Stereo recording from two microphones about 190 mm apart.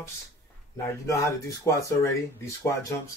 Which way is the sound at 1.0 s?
15° left (ahead or behind).